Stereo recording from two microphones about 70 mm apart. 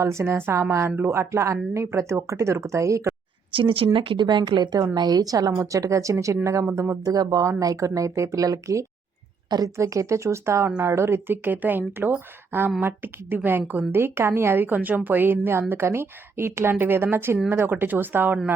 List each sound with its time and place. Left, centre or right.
0.0 s a woman's voice: right
3.8 s a woman's voice: right
6.7 s speech: right
7.0 s speech: right
7.4 s a woman's voice: right